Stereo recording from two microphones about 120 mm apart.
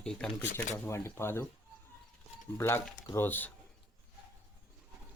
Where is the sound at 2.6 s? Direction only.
20° left (ahead or behind).